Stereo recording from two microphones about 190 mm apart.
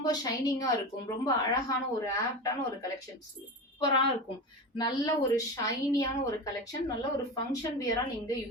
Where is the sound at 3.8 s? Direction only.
25° left (ahead or behind).